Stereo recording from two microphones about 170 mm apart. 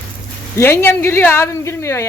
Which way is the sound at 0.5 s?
15° left (ahead or behind).